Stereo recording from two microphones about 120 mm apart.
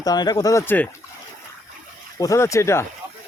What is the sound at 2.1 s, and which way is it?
Speech, 25° left (ahead or behind).